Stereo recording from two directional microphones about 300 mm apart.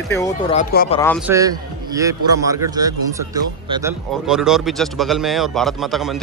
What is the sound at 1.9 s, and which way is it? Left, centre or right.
A man's voice, centre.